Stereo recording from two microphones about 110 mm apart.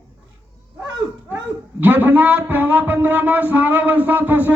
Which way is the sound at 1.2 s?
15° right (ahead or behind).